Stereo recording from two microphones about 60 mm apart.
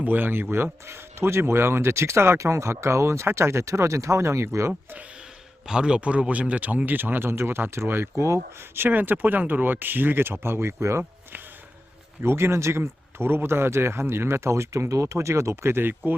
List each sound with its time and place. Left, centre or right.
0.0 s speech: right
0.5 s speech: right
5.6 s speech: centre; by 8.8 s right
8.8 s speech: right
12.2 s speech: right